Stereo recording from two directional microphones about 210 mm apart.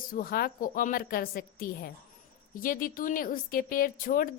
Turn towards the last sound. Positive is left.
turn(degrees=40)  # may be behind; listen again after turning